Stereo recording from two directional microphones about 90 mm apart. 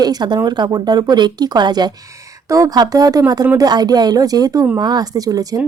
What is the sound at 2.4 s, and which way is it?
Speech, 40° right (ahead or behind).